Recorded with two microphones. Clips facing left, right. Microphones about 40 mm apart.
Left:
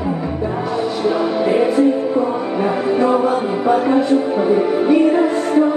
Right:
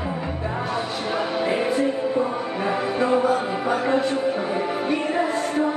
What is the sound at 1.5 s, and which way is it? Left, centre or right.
Music, left.